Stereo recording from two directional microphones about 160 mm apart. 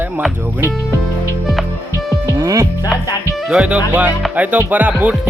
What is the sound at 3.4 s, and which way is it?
Music, 5° right (ahead or behind).